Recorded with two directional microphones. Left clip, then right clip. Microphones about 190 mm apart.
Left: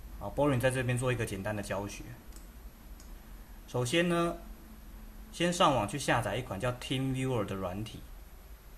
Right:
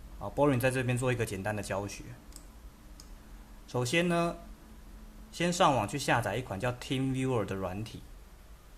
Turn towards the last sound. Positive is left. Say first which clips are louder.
# right 1 dB
turn(degrees=-20)  # may be behind; listen again after turning